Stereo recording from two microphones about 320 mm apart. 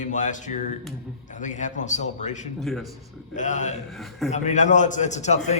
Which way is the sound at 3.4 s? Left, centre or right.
Left.